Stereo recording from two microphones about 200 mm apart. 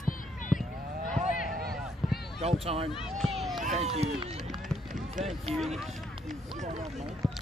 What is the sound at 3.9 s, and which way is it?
Speech, 30° right (ahead or behind).